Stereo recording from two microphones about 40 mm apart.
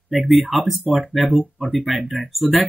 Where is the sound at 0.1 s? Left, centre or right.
Centre.